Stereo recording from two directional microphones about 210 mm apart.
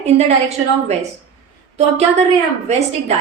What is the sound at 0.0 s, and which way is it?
Speech, 30° right (ahead or behind).